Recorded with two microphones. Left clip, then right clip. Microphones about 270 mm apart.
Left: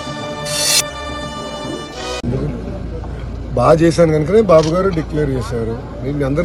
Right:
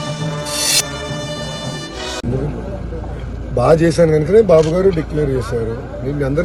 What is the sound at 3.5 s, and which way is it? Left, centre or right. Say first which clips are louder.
Speech: left 1 dB; centre.